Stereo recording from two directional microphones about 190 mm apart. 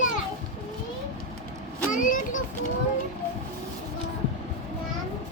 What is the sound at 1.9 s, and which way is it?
Speech, 45° left (ahead or behind).